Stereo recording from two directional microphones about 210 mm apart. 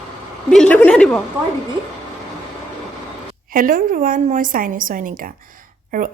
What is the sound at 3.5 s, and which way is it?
A woman's voice, 40° right (ahead or behind).